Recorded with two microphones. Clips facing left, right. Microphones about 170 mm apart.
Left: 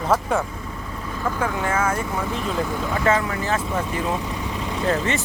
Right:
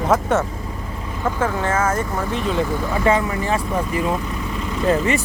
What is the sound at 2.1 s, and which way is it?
Speech, centre (ahead or behind).